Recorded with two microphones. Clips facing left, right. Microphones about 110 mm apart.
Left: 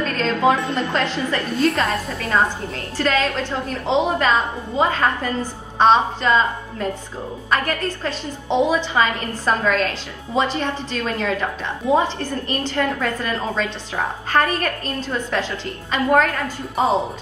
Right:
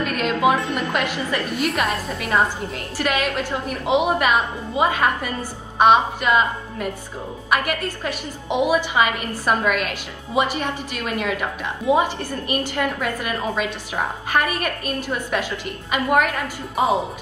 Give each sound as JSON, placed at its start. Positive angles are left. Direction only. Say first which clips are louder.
{"t": 0.0, "sound": "a woman's voice", "louder": "left 1 dB", "side_deg": -15}
{"t": 1.8, "sound": "a woman's voice", "louder": "left 1 dB", "side_deg": 30}
{"t": 3.0, "sound": "a woman's voice", "louder": "left 2 dB", "side_deg": -15}
{"t": 16.7, "sound": "a woman's voice", "louder": "left 1 dB", "side_deg": 30}